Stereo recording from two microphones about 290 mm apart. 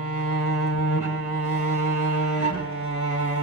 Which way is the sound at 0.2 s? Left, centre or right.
Left.